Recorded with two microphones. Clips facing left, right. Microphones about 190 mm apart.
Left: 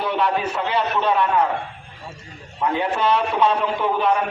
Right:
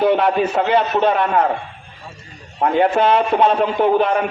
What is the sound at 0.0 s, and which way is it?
A man's voice, 50° right (ahead or behind).